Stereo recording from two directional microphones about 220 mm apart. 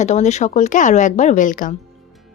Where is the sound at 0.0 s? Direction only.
30° left (ahead or behind).